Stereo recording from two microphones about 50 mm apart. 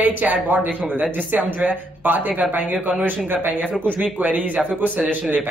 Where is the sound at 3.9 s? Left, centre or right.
Right.